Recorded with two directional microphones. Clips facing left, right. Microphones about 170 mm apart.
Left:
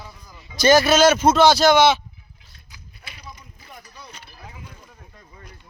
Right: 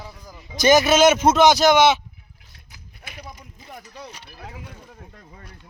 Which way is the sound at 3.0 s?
50° right (ahead or behind).